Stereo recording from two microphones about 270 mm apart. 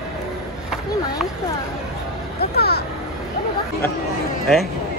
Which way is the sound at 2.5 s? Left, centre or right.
Left.